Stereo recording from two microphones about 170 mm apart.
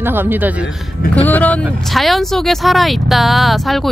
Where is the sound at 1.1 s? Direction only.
10° left (ahead or behind).